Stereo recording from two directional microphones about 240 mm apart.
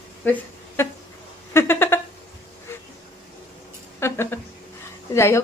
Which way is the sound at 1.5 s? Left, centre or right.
Centre.